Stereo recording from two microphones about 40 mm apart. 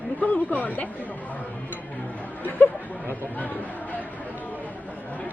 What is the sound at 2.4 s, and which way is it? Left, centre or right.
Speech, left.